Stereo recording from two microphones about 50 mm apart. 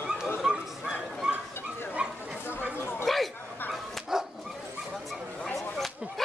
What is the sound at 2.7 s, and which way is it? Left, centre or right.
Chatter, left.